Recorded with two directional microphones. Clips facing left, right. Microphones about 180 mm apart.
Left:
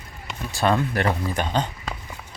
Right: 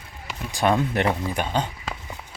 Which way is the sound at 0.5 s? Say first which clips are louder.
Even; 15° right (ahead or behind).